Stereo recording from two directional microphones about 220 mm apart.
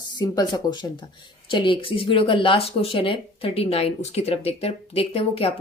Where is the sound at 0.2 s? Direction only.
15° left (ahead or behind).